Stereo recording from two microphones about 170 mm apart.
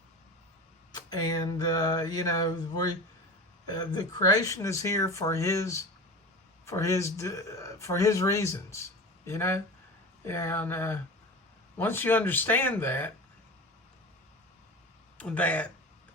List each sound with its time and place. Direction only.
0.9 s speech: 25° left (ahead or behind)
15.2 s speech: 10° left (ahead or behind)